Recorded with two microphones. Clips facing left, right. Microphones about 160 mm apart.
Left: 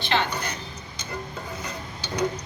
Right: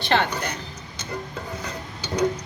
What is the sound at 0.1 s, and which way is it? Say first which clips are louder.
Speech: right 3 dB; 50° right (ahead or behind).